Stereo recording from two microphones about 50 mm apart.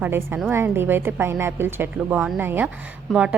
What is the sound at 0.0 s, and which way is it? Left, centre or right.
A woman's voice, right.